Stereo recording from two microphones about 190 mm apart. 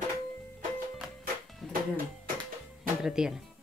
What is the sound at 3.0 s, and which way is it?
Speech, 5° right (ahead or behind).